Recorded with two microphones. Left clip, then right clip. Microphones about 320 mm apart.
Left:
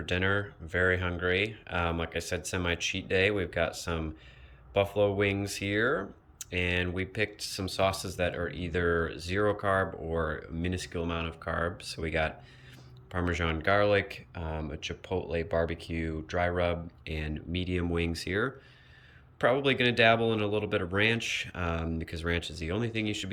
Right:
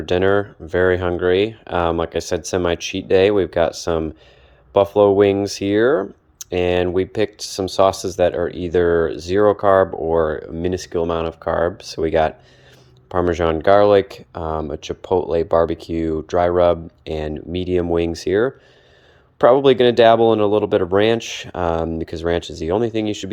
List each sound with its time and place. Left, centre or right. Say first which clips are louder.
0.0 s speech: right 13 dB; centre